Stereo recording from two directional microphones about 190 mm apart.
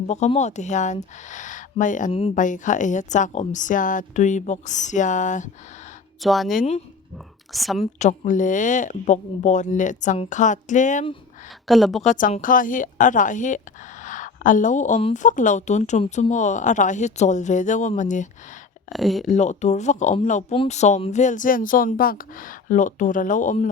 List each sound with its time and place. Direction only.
0.1 s speech: 35° left (ahead or behind)
6.2 s speech: centre (ahead or behind)
6.6 s speech: 35° left (ahead or behind)
7.5 s speech: centre (ahead or behind)
7.9 s speech: 40° left (ahead or behind)
11.7 s speech: centre (ahead or behind)
12.0 s a woman's voice: 40° left (ahead or behind)
18.9 s speech: centre (ahead or behind)
19.3 s a woman's voice: 40° left (ahead or behind)